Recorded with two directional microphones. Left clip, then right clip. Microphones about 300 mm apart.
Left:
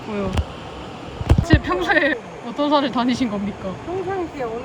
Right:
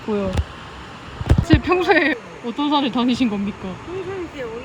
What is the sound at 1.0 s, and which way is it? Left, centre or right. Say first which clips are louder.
Speech: right 1 dB; centre.